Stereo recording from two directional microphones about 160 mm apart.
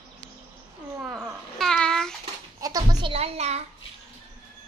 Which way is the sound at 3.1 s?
40° right (ahead or behind).